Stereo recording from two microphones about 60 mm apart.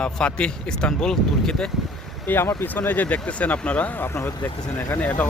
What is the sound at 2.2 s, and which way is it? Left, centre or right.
Speech, left.